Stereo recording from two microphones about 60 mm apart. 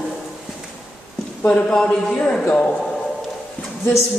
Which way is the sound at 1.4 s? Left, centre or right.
Centre.